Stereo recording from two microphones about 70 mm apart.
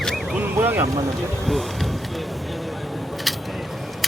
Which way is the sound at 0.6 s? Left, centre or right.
Right.